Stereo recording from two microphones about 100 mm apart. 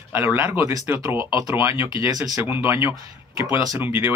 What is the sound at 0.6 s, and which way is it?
Speech, 30° right (ahead or behind).